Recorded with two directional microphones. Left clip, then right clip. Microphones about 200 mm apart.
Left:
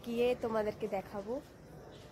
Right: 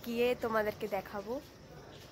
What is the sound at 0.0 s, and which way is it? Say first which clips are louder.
Speech: even; 5° right (ahead or behind).